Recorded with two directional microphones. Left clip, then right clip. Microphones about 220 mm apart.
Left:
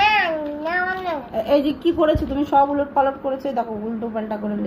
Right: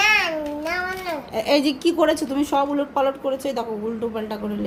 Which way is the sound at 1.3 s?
40° right (ahead or behind).